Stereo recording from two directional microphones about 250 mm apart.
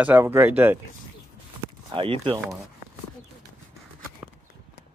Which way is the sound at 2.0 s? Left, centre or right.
Centre.